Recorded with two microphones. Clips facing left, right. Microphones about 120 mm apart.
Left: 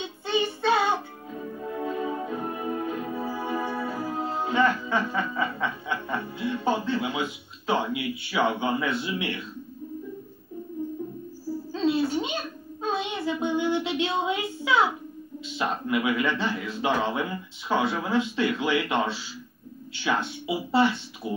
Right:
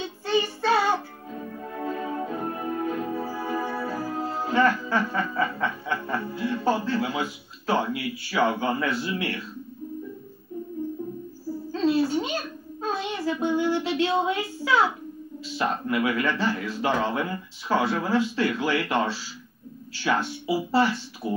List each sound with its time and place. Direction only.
0.2 s child singing: 20° left (ahead or behind)
1.8 s music: 20° left (ahead or behind)
11.8 s a sound: 20° left (ahead or behind)
12.8 s child singing: 20° left (ahead or behind)
15.4 s speech: 20° left (ahead or behind)